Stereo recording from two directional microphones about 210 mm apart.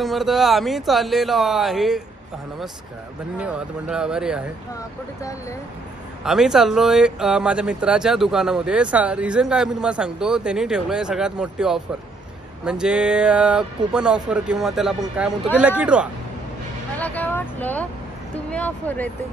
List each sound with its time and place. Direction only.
0.0 s speech: centre (ahead or behind)
3.3 s speech: 5° right (ahead or behind)
6.2 s speech: centre (ahead or behind)
17.0 s speech: 10° left (ahead or behind)